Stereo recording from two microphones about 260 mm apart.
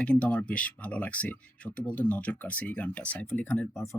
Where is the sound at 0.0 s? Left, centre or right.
Centre.